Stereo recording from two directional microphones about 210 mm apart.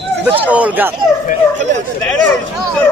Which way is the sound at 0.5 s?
5° right (ahead or behind).